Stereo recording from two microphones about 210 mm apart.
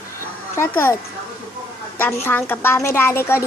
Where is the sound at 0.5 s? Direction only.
10° left (ahead or behind).